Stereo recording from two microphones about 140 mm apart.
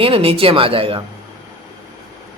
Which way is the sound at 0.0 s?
40° right (ahead or behind).